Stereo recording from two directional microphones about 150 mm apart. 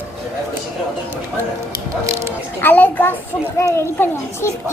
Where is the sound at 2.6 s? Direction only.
10° left (ahead or behind).